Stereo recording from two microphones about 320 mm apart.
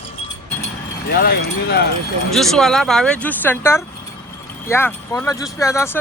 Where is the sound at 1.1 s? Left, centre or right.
Left.